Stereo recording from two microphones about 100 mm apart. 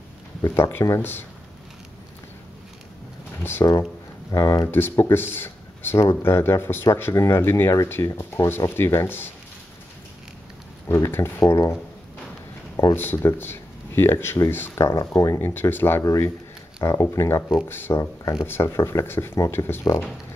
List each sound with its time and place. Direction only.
0.4 s speech: 25° left (ahead or behind)
3.6 s speech: 40° left (ahead or behind)
4.6 s speech: 20° left (ahead or behind)
10.9 s speech: 25° left (ahead or behind)
12.9 s speech: 20° left (ahead or behind)